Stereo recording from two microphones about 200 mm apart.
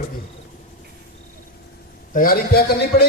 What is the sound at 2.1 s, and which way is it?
Speech, 45° left (ahead or behind).